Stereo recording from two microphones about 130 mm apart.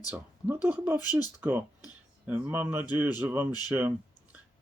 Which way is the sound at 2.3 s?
10° right (ahead or behind).